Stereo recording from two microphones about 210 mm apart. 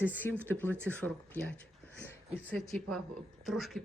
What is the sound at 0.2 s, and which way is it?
Speech, 10° left (ahead or behind).